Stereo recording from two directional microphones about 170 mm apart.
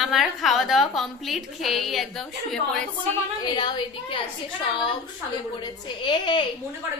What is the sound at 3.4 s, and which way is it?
Speech, 25° left (ahead or behind).